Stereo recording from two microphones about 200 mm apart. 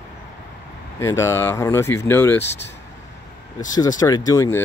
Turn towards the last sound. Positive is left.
turn(degrees=15)  # may be behind; listen again after turning